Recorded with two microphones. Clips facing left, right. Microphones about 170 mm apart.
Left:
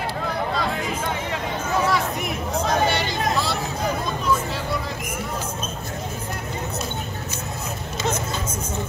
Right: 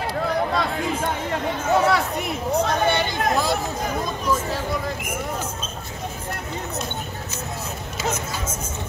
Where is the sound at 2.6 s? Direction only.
55° right (ahead or behind).